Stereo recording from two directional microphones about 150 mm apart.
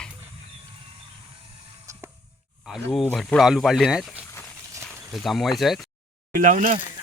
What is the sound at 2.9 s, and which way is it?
Speech, centre (ahead or behind).